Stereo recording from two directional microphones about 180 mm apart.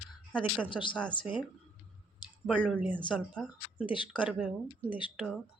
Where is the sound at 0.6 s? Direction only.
25° left (ahead or behind).